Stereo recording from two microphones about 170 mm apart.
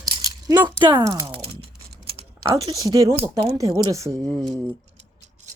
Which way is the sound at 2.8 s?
20° right (ahead or behind).